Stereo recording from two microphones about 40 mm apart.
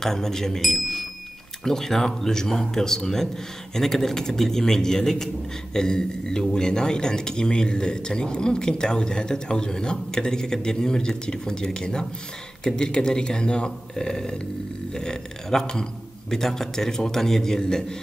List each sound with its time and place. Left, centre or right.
0.0 s a man's voice: centre